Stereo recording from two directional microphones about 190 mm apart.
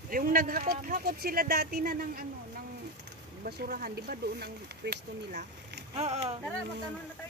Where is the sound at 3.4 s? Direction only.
55° right (ahead or behind).